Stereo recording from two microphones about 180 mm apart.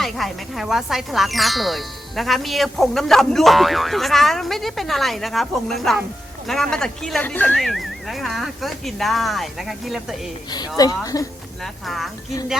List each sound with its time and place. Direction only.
0.0 s speech: centre (ahead or behind)
10.8 s a woman's voice: 20° left (ahead or behind)
11.6 s speech: centre (ahead or behind)